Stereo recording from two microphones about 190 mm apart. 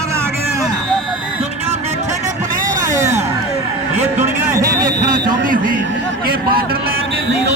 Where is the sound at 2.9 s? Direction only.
15° right (ahead or behind).